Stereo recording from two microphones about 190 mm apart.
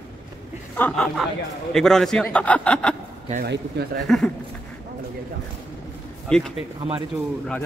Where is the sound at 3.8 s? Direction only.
60° right (ahead or behind).